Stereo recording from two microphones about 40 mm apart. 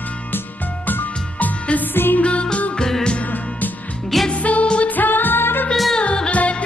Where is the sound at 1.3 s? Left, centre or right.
Left.